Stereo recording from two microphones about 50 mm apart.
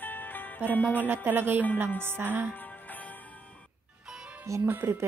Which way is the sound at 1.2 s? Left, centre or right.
Right.